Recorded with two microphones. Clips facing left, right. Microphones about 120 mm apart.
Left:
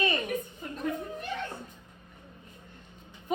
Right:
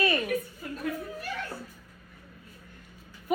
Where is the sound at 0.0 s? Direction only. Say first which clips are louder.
Right 2 dB; 20° left (ahead or behind).